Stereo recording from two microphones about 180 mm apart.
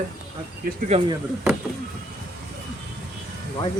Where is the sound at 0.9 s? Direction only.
35° right (ahead or behind).